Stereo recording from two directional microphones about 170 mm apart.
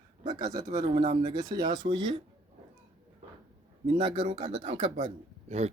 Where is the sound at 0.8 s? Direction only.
35° right (ahead or behind).